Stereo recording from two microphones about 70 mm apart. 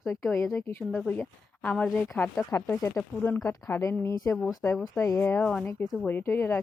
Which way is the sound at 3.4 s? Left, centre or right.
Left.